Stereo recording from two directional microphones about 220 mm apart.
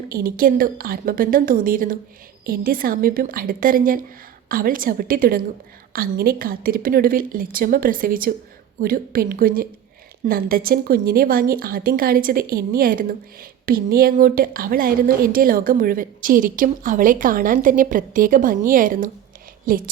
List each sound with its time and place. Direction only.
0.1 s a woman's voice: 40° right (ahead or behind)